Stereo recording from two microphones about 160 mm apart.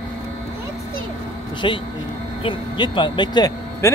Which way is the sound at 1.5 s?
30° left (ahead or behind).